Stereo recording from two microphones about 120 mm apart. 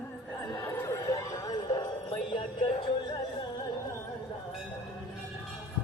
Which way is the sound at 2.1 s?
45° left (ahead or behind).